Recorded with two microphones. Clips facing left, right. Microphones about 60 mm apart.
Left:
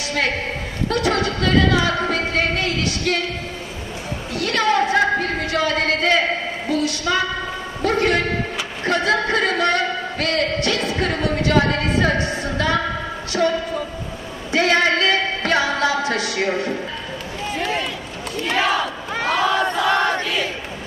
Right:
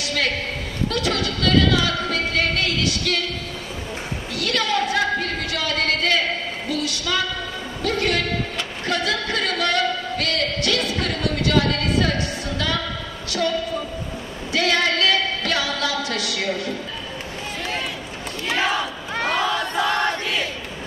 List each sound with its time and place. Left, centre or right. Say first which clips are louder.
0.8 s singing: left 4 dB; left
4.4 s a sound: left 4 dB; left
7.8 s music: left 4 dB; left
8.8 s a sound: left 5 dB; left
18.5 s battle cry: left 2 dB; centre
19.9 s battle cry: left 4 dB; left